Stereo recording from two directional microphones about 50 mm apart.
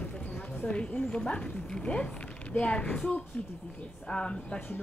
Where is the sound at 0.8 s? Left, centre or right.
Left.